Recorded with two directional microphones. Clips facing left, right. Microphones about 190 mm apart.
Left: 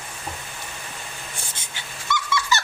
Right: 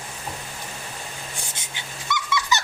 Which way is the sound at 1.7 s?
15° right (ahead or behind).